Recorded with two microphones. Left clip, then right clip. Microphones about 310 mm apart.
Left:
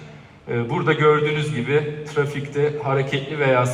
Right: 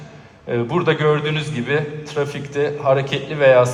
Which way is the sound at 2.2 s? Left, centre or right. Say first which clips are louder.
Right 1 dB; right.